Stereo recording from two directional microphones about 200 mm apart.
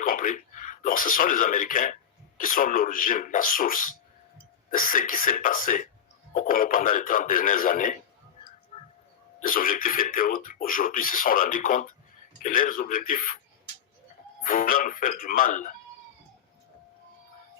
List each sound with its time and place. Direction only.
0.0 s speech: 45° left (ahead or behind)
9.4 s speech: 45° left (ahead or behind)
14.4 s speech: 45° left (ahead or behind)